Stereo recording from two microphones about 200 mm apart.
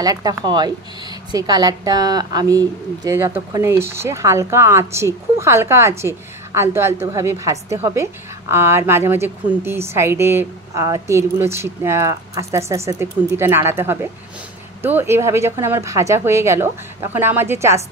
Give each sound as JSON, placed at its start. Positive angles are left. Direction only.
{"t": 0.0, "sound": "a woman's voice", "side_deg": -20}